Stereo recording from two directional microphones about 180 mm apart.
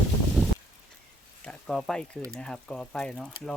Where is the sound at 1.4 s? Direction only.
5° left (ahead or behind).